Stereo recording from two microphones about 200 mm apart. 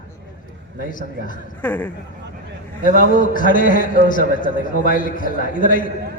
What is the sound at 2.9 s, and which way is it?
A man's voice, 45° left (ahead or behind).